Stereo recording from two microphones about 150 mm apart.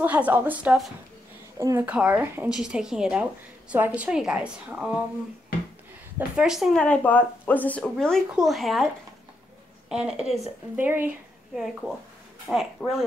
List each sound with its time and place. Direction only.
0.0 s speech: 10° right (ahead or behind)
1.9 s speech: 10° right (ahead or behind)
6.1 s a woman's voice: 5° right (ahead or behind)
9.8 s a woman's voice: 5° right (ahead or behind)
10.8 s speech: 10° right (ahead or behind)
11.5 s a woman's voice: centre (ahead or behind)